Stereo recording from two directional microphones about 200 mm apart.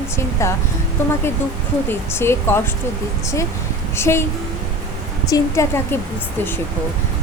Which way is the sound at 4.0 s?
15° left (ahead or behind).